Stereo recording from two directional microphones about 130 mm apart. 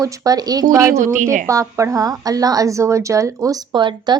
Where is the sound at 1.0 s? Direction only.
75° right (ahead or behind).